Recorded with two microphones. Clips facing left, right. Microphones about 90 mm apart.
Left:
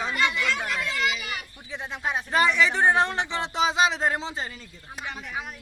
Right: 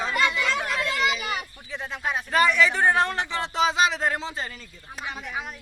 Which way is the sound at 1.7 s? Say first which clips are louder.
Even; 20° left (ahead or behind).